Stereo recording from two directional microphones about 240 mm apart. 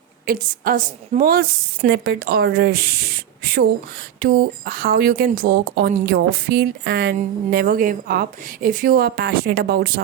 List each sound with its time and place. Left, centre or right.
0.3 s a woman's voice: right